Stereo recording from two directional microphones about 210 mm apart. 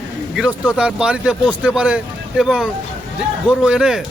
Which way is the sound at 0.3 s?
5° right (ahead or behind).